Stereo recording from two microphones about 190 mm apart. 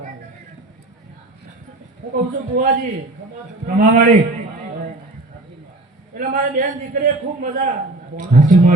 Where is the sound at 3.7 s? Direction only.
45° right (ahead or behind).